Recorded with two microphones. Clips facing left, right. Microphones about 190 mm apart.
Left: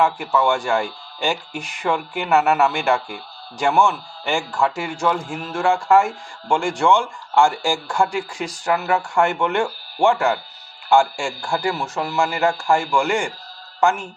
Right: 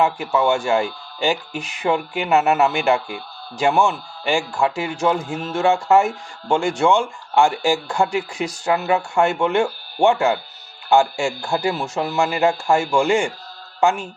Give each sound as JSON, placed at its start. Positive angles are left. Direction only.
{"t": 0.0, "sound": "speech", "side_deg": -20}